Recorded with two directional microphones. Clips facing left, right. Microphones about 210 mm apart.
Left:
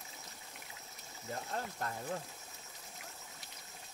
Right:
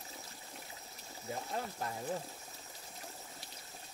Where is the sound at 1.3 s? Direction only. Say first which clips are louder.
Right 1 dB; 10° right (ahead or behind).